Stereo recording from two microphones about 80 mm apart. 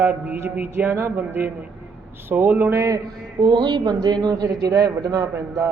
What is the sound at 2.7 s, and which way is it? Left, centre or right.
Speech, right.